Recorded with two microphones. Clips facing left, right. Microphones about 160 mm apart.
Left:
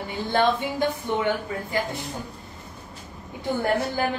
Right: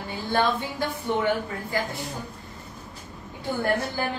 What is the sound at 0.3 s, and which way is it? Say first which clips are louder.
Speech: left 2 dB; 20° left (ahead or behind).